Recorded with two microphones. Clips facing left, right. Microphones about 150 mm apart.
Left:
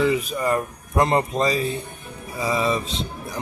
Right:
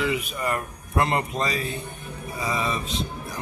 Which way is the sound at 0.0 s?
35° left (ahead or behind).